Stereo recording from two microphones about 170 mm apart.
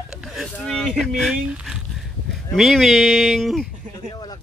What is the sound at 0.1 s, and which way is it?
Speech, 5° right (ahead or behind).